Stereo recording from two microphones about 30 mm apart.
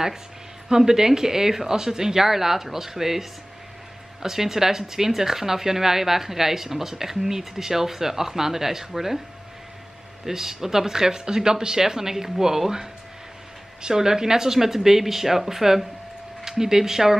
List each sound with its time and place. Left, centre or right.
0.7 s a woman's voice: centre
10.2 s speech: centre
13.8 s speech: centre